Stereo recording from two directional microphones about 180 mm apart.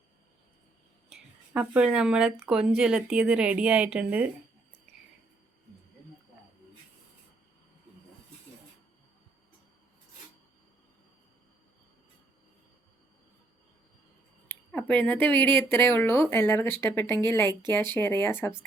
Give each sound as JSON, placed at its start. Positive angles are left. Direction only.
{"t": 1.1, "sound": "speech", "side_deg": -5}
{"t": 14.4, "sound": "speech", "side_deg": 10}